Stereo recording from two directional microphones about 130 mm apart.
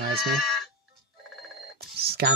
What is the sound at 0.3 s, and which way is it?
Sheep, centre (ahead or behind).